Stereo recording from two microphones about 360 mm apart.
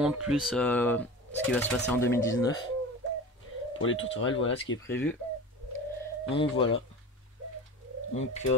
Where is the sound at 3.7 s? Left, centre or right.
Left.